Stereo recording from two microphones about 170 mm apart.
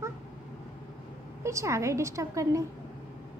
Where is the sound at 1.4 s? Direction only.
15° right (ahead or behind).